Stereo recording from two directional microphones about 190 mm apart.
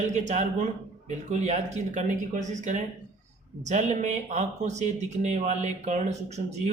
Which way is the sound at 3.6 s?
40° right (ahead or behind).